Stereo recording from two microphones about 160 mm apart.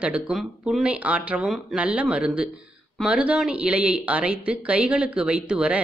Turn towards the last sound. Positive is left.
turn(degrees=-5)  # may be behind; listen again after turning